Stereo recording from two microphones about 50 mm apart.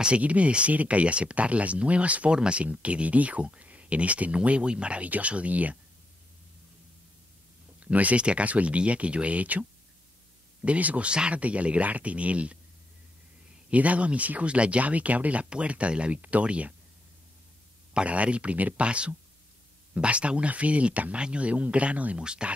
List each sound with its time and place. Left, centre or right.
0.0 s speech: right
7.8 s speech: right
13.7 s speech: right
17.9 s speech: right